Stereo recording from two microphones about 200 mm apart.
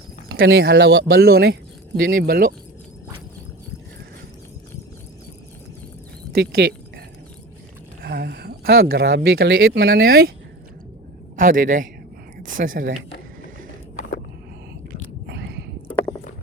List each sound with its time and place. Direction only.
0.3 s speech: 55° right (ahead or behind)
6.3 s a sound: 55° right (ahead or behind)
8.0 s speech: 50° right (ahead or behind)
11.3 s speech: 45° right (ahead or behind)
15.3 s whispering: 55° right (ahead or behind)